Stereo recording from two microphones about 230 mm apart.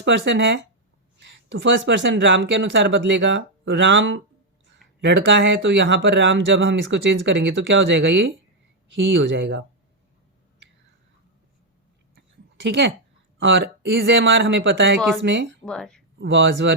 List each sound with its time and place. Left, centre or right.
0.0 s speech: right
12.5 s speech: right
15.6 s speech: centre
16.1 s speech: right